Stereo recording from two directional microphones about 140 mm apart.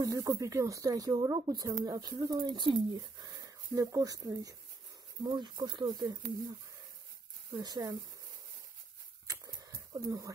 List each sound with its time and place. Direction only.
0.0 s speech: 25° right (ahead or behind)
7.5 s speech: 25° right (ahead or behind)
9.3 s a sound: 25° right (ahead or behind)